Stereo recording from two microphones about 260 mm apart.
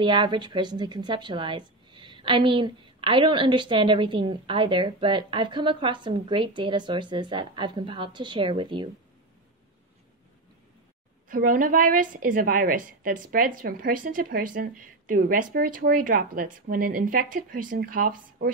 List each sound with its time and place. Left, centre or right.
0.0 s a woman's voice: centre
11.2 s a woman's voice: right